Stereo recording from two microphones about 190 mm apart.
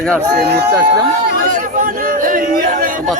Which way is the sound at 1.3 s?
45° right (ahead or behind).